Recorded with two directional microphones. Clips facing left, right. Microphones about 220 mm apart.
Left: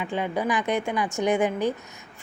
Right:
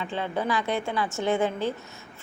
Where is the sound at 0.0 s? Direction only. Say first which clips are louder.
Left 2 dB; 15° left (ahead or behind).